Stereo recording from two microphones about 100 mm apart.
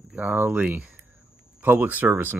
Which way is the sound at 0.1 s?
15° right (ahead or behind).